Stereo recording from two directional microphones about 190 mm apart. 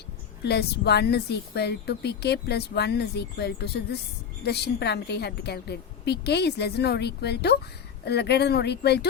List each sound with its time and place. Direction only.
0.4 s a woman's voice: 60° left (ahead or behind)